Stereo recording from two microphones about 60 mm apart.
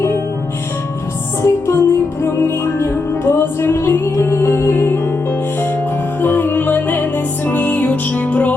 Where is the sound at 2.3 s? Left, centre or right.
Left.